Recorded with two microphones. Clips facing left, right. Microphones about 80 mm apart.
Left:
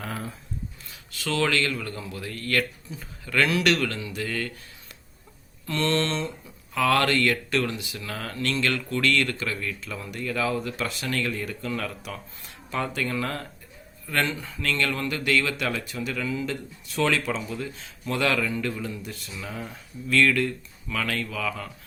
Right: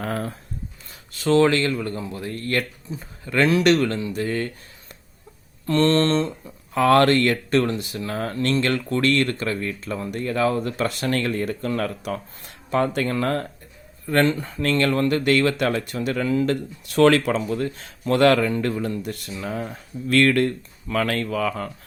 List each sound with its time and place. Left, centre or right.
0.0 s speech: right
0.9 s speech: right
5.6 s speech: right
19.4 s speech: right